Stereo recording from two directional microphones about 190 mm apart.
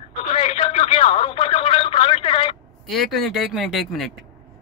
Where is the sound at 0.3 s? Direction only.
35° left (ahead or behind).